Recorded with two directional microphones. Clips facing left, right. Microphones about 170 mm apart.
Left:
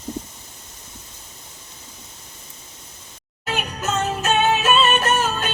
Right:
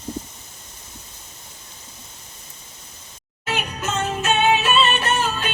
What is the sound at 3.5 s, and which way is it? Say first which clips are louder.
Music: left 1 dB; 40° left (ahead or behind).